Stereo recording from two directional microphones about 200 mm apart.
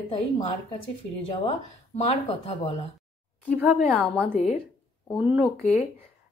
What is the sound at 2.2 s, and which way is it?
Speech, 30° left (ahead or behind).